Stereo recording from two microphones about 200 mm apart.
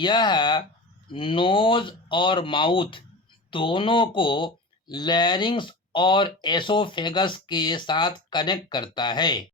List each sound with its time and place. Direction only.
0.0 s speech: 20° left (ahead or behind)